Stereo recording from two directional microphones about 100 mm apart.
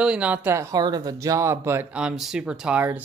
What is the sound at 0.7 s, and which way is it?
Speech, 45° right (ahead or behind).